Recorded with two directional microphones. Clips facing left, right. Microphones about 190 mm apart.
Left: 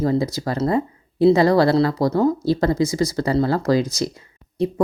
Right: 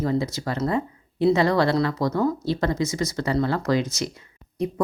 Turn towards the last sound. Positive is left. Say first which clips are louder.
# left 5 dB
turn(degrees=30)  # may be behind; listen again after turning